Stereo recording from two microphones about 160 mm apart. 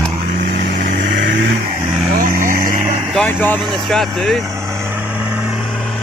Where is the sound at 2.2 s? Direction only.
55° right (ahead or behind).